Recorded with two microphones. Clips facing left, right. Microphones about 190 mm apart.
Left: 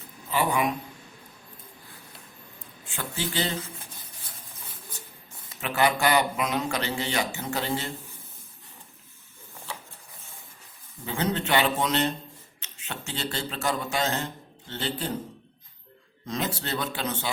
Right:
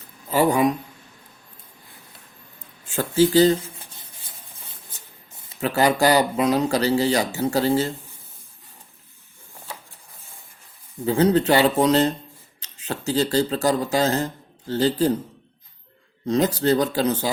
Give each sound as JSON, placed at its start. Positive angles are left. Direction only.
{"t": 0.3, "sound": "speech", "side_deg": -40}
{"t": 2.9, "sound": "speech", "side_deg": -40}
{"t": 5.5, "sound": "speech", "side_deg": -35}
{"t": 11.0, "sound": "speech", "side_deg": -35}
{"t": 16.2, "sound": "speech", "side_deg": -35}